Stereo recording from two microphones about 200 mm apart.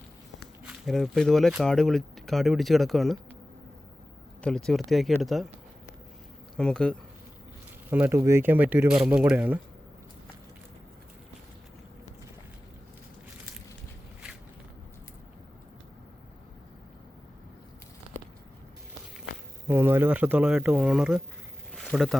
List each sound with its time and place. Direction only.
0.6 s speech: centre (ahead or behind)
4.4 s speech: 5° left (ahead or behind)
6.6 s speech: 5° left (ahead or behind)
7.9 s speech: 10° right (ahead or behind)
19.6 s speech: 10° right (ahead or behind)
21.8 s a sound: centre (ahead or behind)